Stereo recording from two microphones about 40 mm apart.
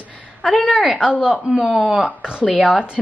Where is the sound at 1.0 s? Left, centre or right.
Right.